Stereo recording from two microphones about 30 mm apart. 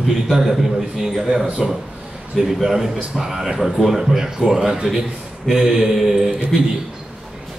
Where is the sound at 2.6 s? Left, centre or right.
Centre.